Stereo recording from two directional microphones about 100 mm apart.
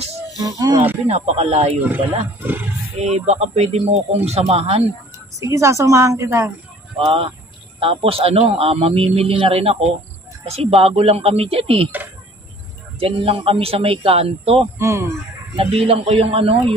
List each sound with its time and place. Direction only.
0.4 s speech: 40° right (ahead or behind)
1.0 s speech: 90° right
3.0 s speech: 90° right
5.4 s a woman's voice: 30° right (ahead or behind)
7.1 s speech: 70° right (ahead or behind)
13.0 s speech: 65° right (ahead or behind)
14.8 s a woman's voice: 30° right (ahead or behind)
15.5 s speech: 75° right (ahead or behind)